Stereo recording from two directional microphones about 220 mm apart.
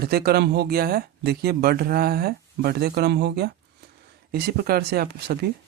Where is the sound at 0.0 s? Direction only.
45° right (ahead or behind).